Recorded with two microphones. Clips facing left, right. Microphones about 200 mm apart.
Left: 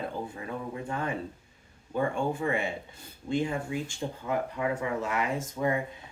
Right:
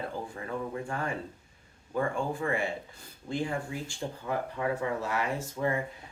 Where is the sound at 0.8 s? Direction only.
20° left (ahead or behind).